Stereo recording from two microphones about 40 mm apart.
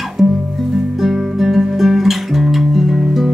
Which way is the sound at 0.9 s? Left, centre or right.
Centre.